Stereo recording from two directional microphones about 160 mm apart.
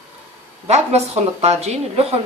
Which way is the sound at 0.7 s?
45° right (ahead or behind).